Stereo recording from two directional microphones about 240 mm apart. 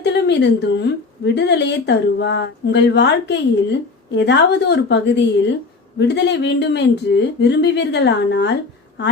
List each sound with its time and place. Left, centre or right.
0.0 s a woman's voice: left